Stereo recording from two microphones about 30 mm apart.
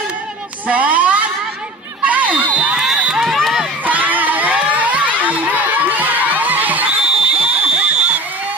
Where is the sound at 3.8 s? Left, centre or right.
Right.